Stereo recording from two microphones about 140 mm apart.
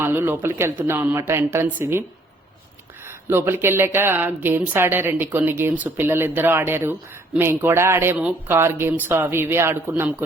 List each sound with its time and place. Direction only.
0.0 s speech: 15° right (ahead or behind)
3.1 s speech: 15° right (ahead or behind)